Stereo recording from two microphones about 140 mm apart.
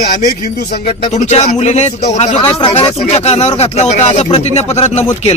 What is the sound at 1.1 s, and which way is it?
Speech, 55° left (ahead or behind).